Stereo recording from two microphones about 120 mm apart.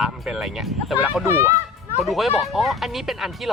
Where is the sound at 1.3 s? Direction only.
20° right (ahead or behind).